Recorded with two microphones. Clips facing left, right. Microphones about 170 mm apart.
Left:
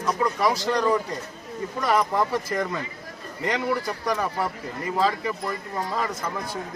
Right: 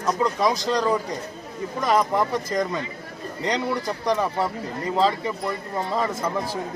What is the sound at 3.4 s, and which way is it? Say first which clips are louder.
A man's voice: even; 20° right (ahead or behind).